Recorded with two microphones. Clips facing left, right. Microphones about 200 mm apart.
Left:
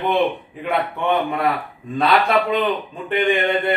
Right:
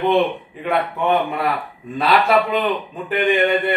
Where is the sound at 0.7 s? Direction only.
Centre (ahead or behind).